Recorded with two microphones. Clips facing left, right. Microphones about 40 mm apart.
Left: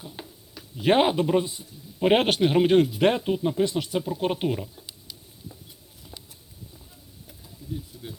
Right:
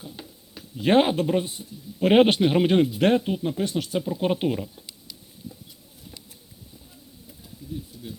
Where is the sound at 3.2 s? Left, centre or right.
Centre.